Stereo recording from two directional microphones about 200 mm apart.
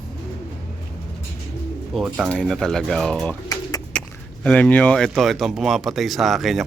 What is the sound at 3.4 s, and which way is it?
Pigeon, 20° left (ahead or behind).